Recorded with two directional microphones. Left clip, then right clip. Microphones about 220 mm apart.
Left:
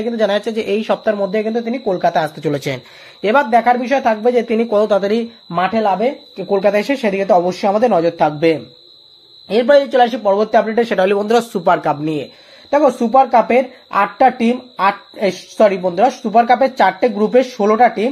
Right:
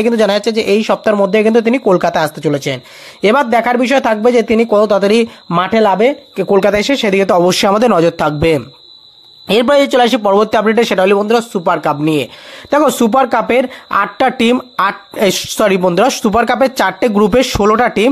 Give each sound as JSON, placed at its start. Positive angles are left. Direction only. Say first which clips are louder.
{"t": 0.2, "sound": "speech", "louder": "right 4 dB", "side_deg": -20}
{"t": 2.4, "sound": "speech", "louder": "right 4 dB", "side_deg": -10}
{"t": 3.2, "sound": "speech", "louder": "right 2 dB", "side_deg": -25}
{"t": 12.6, "sound": "speech", "louder": "right 2 dB", "side_deg": -40}